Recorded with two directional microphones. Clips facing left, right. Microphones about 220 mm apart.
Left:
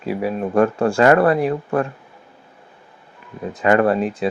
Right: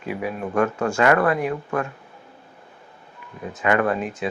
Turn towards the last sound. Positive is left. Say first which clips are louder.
# left 5 dB
turn(degrees=35)  # may be behind; listen again after turning